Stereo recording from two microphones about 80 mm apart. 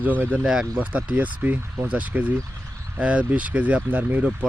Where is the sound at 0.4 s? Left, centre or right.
Centre.